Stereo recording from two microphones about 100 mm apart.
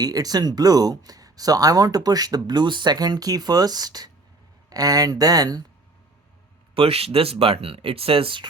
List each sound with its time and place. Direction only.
0.0 s speech: 40° right (ahead or behind)
6.7 s speech: 75° right (ahead or behind)